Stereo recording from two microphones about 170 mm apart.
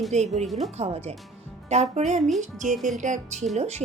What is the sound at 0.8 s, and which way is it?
Speech, 40° right (ahead or behind).